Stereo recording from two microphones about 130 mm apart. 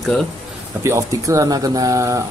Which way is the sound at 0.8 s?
25° right (ahead or behind).